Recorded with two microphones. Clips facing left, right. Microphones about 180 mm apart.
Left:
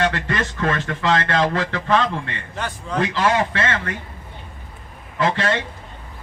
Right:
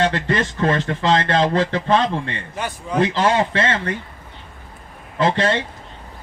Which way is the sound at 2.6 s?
10° right (ahead or behind).